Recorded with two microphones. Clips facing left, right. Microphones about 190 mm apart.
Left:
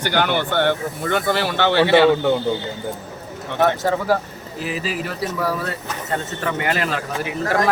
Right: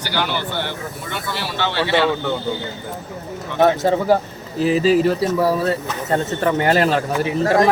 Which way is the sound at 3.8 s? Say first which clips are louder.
Right 3 dB; 20° right (ahead or behind).